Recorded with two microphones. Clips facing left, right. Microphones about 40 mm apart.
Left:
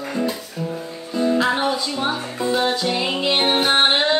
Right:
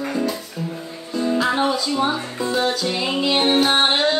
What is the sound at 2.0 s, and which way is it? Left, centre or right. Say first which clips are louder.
Music: even; centre.